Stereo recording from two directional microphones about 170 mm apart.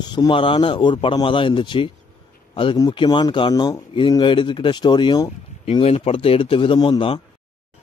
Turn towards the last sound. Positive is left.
turn(degrees=30)  # may be behind; listen again after turning